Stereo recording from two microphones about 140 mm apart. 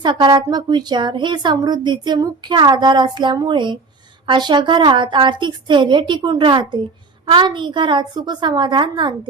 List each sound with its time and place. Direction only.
0.0 s speech: 30° right (ahead or behind)